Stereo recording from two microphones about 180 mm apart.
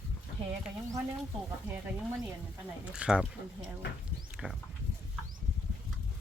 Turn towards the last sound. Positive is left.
turn(degrees=0)  # may be behind; listen again after turning